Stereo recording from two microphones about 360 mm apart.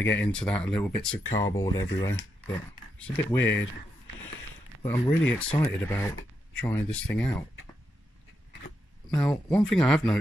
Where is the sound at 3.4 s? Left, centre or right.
Left.